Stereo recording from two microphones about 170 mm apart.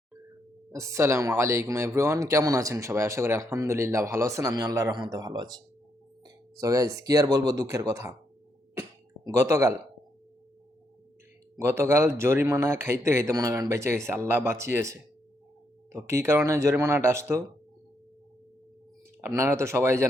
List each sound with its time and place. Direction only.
0.7 s speech: 15° right (ahead or behind)
8.7 s a sound: 15° right (ahead or behind)
11.6 s speech: 15° right (ahead or behind)
19.2 s speech: 15° right (ahead or behind)